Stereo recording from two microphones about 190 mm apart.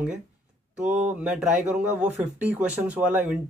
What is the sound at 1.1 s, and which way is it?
Speech, 5° right (ahead or behind).